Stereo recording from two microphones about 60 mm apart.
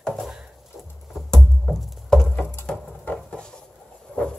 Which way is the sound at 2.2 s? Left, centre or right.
Left.